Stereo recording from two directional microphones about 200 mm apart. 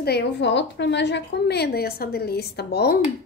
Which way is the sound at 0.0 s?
55° left (ahead or behind).